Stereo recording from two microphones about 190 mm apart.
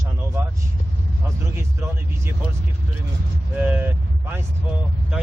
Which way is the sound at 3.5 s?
10° right (ahead or behind).